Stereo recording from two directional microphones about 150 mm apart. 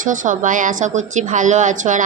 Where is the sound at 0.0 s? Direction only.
60° right (ahead or behind).